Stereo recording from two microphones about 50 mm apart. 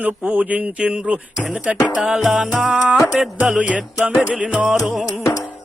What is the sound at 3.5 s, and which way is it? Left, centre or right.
Speech, right.